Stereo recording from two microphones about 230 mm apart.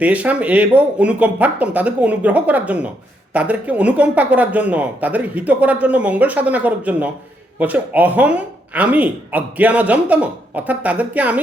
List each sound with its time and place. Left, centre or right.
0.0 s speech: centre